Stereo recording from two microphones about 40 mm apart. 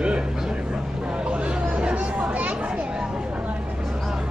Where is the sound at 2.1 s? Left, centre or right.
Right.